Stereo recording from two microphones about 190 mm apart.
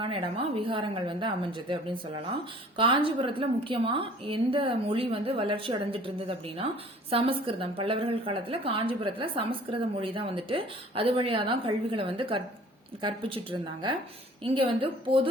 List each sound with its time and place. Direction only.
0.0 s a woman's voice: 30° right (ahead or behind)